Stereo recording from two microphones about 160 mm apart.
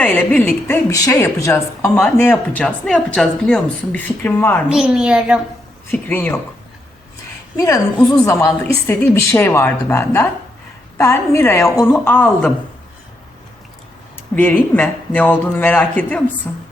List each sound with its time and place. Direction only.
0.0 s speech: 10° left (ahead or behind)
0.9 s speech: 20° left (ahead or behind)
4.7 s a woman's voice: 5° right (ahead or behind)
5.9 s speech: 10° left (ahead or behind)
7.5 s a woman's voice: 20° left (ahead or behind)
14.3 s speech: 10° left (ahead or behind)